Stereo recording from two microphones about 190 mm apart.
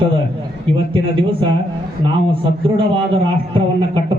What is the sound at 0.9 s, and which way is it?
A man's voice, 30° right (ahead or behind).